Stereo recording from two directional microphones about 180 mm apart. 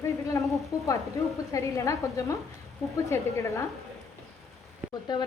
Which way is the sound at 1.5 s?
15° left (ahead or behind).